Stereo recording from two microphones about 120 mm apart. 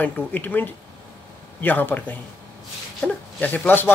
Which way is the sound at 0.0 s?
15° left (ahead or behind).